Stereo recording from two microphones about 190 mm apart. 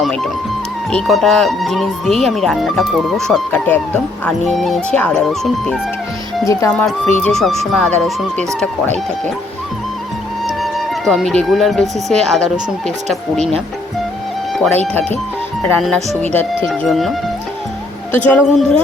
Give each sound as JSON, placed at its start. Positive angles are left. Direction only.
{"t": 0.0, "sound": "speech", "side_deg": 0}
{"t": 6.4, "sound": "speech", "side_deg": 15}
{"t": 6.7, "sound": "speech", "side_deg": 5}
{"t": 10.4, "sound": "speech", "side_deg": 0}
{"t": 14.6, "sound": "speech", "side_deg": 10}
{"t": 16.0, "sound": "speech", "side_deg": -35}
{"t": 16.6, "sound": "speech", "side_deg": 0}
{"t": 18.3, "sound": "speech", "side_deg": 5}